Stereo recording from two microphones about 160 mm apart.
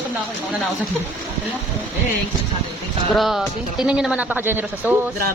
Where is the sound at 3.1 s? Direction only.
Centre (ahead or behind).